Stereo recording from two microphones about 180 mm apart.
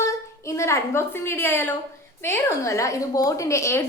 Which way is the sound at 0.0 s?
15° left (ahead or behind).